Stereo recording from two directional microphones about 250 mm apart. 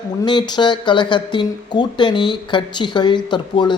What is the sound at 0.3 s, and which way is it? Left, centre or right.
Speech, centre.